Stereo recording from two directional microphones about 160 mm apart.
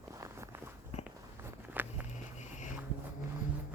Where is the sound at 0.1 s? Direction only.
20° right (ahead or behind).